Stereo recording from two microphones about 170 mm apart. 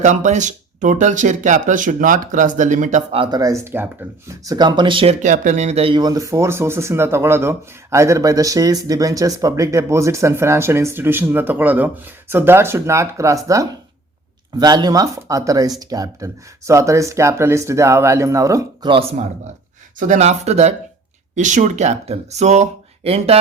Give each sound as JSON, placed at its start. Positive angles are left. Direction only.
{"t": 0.0, "sound": "speech", "side_deg": -45}
{"t": 3.2, "sound": "speech", "side_deg": -25}
{"t": 5.2, "sound": "speech", "side_deg": -50}
{"t": 20.0, "sound": "speech", "side_deg": -45}